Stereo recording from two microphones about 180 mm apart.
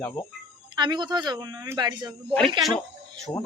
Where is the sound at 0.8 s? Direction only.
25° right (ahead or behind).